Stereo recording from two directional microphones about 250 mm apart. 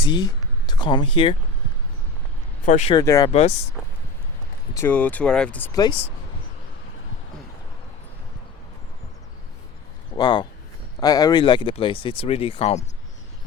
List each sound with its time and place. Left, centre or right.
0.0 s speech: centre
2.6 s speech: left
2.9 s speech: centre
4.7 s speech: centre
10.2 s speech: centre